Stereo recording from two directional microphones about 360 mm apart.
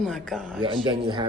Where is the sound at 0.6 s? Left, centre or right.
Centre.